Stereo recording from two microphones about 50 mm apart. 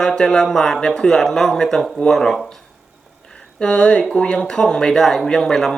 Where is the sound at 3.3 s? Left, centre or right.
Centre.